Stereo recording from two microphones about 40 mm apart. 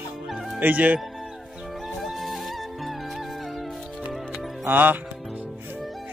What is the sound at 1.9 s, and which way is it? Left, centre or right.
Music, centre.